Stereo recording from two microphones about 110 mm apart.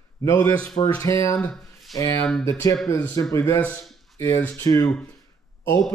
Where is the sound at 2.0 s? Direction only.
25° left (ahead or behind).